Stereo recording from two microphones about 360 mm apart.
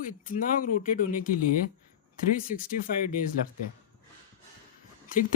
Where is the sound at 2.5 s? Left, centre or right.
Left.